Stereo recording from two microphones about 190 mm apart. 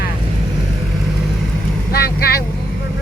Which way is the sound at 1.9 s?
55° left (ahead or behind).